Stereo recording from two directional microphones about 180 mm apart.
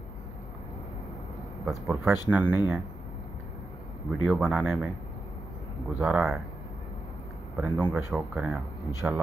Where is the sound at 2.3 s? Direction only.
10° right (ahead or behind).